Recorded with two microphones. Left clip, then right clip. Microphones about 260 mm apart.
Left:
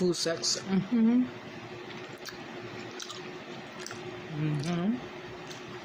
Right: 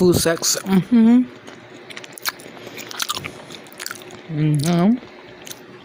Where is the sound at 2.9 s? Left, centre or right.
Right.